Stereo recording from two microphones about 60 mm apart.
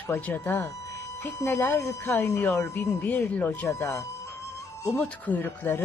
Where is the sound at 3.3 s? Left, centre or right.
Left.